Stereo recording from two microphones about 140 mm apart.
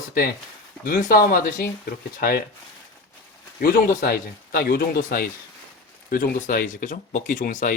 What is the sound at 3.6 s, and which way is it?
Speech, 90° left.